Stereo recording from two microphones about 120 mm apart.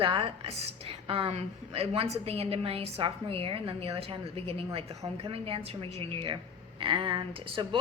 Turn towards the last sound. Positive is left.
turn(degrees=-45)  # may be behind; listen again after turning